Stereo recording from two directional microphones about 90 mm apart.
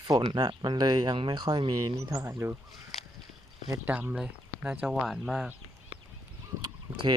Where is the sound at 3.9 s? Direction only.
15° right (ahead or behind).